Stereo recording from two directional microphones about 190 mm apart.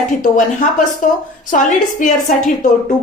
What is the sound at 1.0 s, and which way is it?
A woman's voice, 40° left (ahead or behind).